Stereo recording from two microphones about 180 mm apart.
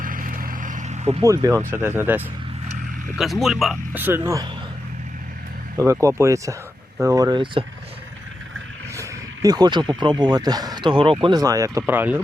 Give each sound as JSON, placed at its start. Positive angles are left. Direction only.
{"t": 0.0, "sound": "vehicle", "side_deg": -50}
{"t": 1.2, "sound": "speech", "side_deg": -20}
{"t": 3.2, "sound": "speech", "side_deg": 0}
{"t": 4.0, "sound": "speech", "side_deg": -15}
{"t": 5.7, "sound": "speech", "side_deg": -15}
{"t": 9.0, "sound": "speech", "side_deg": -20}